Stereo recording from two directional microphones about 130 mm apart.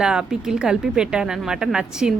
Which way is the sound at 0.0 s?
5° right (ahead or behind).